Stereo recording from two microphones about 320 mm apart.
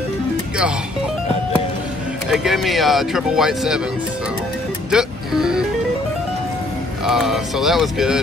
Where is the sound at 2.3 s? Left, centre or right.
Centre.